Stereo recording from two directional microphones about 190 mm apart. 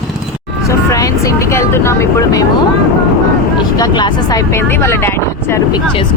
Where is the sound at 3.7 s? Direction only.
20° left (ahead or behind).